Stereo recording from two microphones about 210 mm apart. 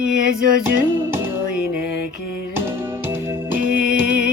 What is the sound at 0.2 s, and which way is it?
Music, 40° right (ahead or behind).